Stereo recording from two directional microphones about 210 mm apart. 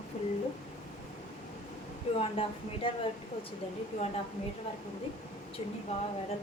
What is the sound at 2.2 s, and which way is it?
Speech, 25° left (ahead or behind).